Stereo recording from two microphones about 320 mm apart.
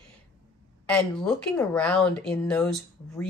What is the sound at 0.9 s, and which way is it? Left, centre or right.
Speech, centre.